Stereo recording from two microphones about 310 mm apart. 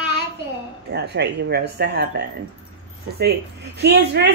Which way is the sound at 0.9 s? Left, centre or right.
Right.